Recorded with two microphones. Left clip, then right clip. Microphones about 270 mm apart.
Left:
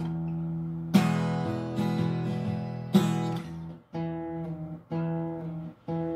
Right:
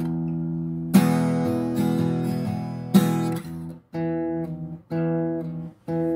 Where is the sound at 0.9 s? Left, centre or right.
Right.